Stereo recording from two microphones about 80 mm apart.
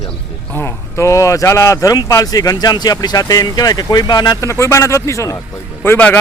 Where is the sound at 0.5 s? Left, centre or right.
Left.